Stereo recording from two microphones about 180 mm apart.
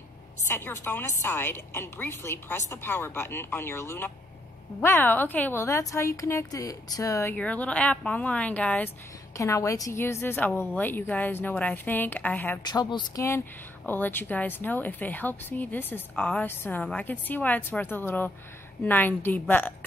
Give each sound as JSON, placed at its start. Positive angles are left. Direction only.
{"t": 0.4, "sound": "speech", "side_deg": 10}
{"t": 12.7, "sound": "speech", "side_deg": 25}